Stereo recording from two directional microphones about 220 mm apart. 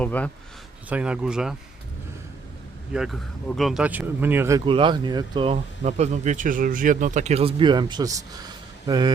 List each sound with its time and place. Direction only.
0.0 s a man's voice: 5° left (ahead or behind)
0.9 s speech: 5° right (ahead or behind)
2.9 s speech: centre (ahead or behind); by 9.1 s 20° right (ahead or behind)